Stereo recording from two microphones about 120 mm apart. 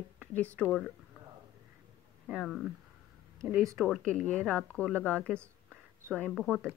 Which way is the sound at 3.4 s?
25° right (ahead or behind).